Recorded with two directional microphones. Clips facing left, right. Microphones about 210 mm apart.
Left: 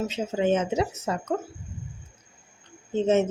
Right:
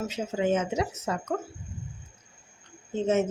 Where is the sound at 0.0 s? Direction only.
25° left (ahead or behind).